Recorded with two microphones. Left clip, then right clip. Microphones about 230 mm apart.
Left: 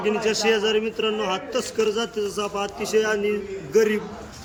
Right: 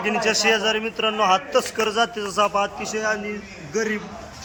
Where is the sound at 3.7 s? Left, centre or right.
Centre.